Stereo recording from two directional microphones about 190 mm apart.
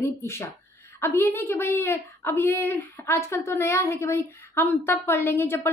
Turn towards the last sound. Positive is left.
turn(degrees=10)  # may be behind; listen again after turning